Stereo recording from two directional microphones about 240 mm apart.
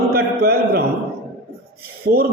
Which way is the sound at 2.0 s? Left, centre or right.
Right.